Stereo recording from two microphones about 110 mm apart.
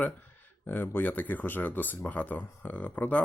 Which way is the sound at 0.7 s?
15° left (ahead or behind).